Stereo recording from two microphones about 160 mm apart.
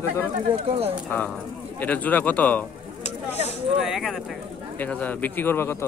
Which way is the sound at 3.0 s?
45° left (ahead or behind).